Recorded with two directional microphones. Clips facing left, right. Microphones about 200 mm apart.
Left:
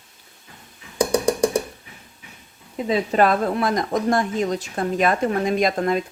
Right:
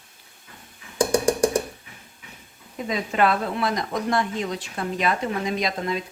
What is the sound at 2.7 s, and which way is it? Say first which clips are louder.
Speech: left 5 dB; 35° left (ahead or behind).